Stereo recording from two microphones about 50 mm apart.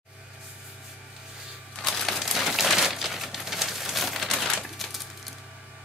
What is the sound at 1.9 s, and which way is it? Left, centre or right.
Crumpling, centre.